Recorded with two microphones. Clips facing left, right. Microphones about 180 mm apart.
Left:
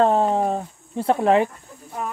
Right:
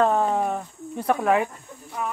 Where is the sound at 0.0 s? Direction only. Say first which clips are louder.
Left 3 dB; 30° left (ahead or behind).